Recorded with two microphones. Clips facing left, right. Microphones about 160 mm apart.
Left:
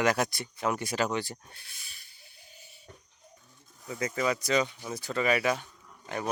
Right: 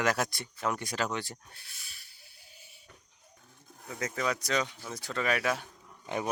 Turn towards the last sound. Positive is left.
turn(degrees=-15)  # may be behind; listen again after turning